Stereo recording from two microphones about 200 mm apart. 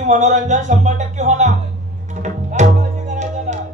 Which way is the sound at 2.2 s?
35° right (ahead or behind).